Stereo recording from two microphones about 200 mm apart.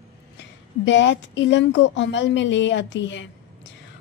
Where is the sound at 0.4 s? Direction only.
65° left (ahead or behind).